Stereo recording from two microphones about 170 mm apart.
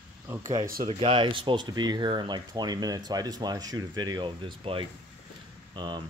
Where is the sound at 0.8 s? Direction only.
30° right (ahead or behind).